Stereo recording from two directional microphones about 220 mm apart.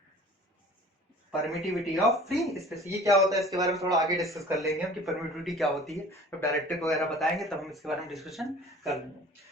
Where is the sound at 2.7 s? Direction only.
15° right (ahead or behind).